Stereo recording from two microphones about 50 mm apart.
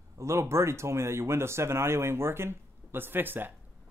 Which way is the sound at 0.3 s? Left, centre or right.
Right.